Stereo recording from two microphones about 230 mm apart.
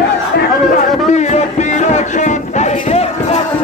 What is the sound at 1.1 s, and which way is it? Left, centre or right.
Music, left.